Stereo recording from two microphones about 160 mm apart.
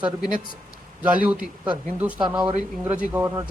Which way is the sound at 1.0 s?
10° right (ahead or behind).